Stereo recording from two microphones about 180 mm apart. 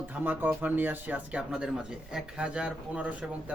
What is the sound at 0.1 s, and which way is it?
Speech, 10° right (ahead or behind).